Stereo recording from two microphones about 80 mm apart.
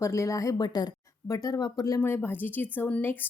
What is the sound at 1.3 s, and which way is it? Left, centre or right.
Speech, left.